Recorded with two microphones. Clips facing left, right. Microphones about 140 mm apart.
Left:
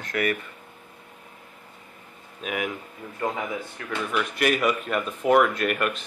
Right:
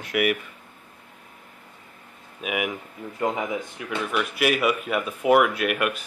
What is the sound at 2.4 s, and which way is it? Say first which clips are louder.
Speech: right 2 dB; 10° right (ahead or behind).